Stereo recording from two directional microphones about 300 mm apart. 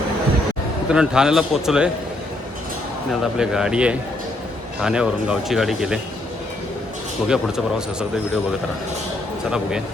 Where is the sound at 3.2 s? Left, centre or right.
Centre.